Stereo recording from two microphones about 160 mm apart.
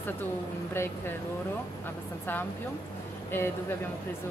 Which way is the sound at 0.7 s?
15° left (ahead or behind).